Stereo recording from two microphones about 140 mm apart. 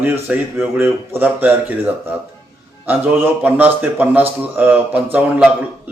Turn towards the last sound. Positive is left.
turn(degrees=-10)  # may be behind; listen again after turning